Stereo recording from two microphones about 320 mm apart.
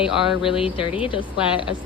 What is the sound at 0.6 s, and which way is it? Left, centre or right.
Speech, centre.